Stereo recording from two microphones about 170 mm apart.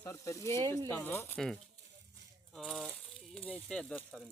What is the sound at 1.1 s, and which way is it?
Speech, 15° left (ahead or behind).